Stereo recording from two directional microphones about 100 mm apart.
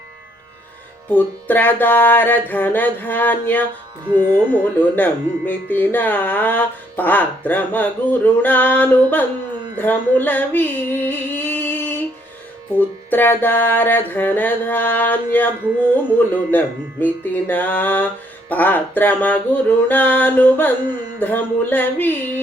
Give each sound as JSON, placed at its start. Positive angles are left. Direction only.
{"t": 1.1, "sound": "speech", "side_deg": 15}
{"t": 4.8, "sound": "speech", "side_deg": 15}
{"t": 9.7, "sound": "music", "side_deg": 20}
{"t": 16.1, "sound": "speech", "side_deg": 20}
{"t": 21.2, "sound": "music", "side_deg": 20}